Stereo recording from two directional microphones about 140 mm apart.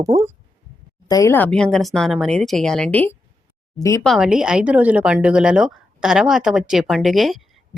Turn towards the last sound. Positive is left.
turn(degrees=0)  # may be behind; listen again after turning